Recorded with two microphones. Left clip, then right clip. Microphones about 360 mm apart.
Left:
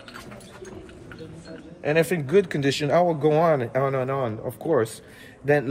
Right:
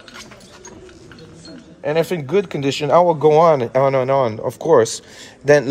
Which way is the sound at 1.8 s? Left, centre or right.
Centre.